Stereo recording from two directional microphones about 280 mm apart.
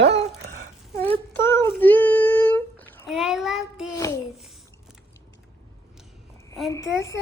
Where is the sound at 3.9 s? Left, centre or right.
Centre.